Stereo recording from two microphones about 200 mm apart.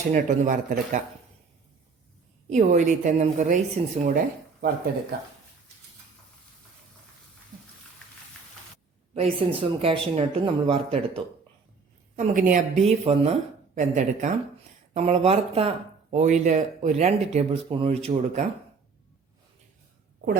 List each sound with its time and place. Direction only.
0.1 s speech: 40° right (ahead or behind)
2.5 s speech: 35° right (ahead or behind)
9.1 s speech: 30° right (ahead or behind)
12.1 s speech: 40° right (ahead or behind)